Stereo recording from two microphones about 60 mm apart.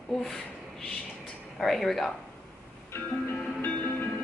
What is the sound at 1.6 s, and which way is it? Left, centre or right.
Speech, centre.